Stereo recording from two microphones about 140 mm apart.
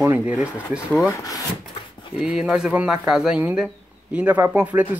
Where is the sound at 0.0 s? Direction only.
15° right (ahead or behind).